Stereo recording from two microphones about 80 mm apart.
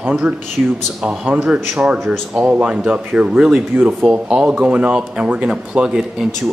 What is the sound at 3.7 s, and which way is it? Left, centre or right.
Speech, right.